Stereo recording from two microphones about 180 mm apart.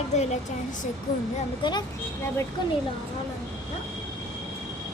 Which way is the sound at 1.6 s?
30° left (ahead or behind).